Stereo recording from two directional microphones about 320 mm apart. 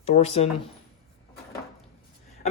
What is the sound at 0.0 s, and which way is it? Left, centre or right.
Speech, centre.